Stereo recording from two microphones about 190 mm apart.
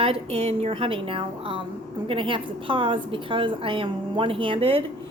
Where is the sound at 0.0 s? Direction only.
30° right (ahead or behind).